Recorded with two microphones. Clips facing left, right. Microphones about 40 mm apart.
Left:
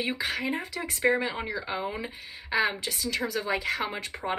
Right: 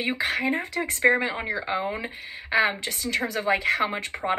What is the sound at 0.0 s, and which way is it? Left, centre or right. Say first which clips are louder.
A woman's voice: right 4 dB; right.